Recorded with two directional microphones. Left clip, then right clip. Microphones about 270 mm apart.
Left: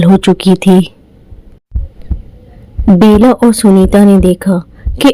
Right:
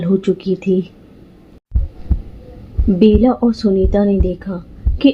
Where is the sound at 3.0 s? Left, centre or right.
Left.